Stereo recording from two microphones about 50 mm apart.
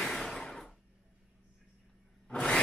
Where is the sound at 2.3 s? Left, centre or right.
Centre.